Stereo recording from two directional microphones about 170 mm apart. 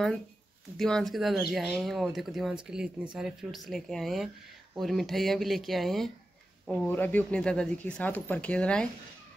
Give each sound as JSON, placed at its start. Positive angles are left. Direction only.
{"t": 0.7, "sound": "speech", "side_deg": 5}